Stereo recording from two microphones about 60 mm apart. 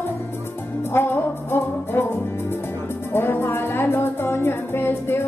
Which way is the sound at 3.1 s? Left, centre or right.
Left.